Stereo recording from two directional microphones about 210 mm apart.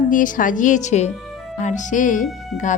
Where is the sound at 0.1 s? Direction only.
40° left (ahead or behind).